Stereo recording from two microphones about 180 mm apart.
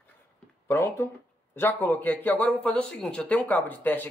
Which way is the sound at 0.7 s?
15° left (ahead or behind).